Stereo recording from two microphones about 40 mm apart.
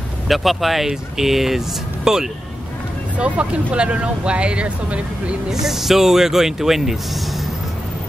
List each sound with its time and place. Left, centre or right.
0.3 s speech: centre
3.2 s speech: right
5.5 s speech: centre